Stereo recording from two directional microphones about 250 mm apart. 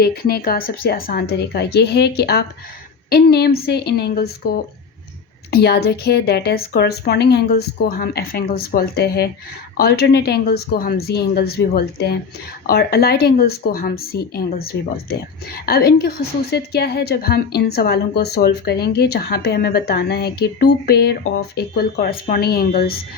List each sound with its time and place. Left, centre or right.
0.0 s a woman's voice: left